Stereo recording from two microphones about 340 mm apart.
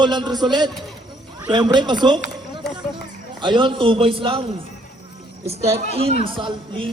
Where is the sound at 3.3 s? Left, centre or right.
Centre.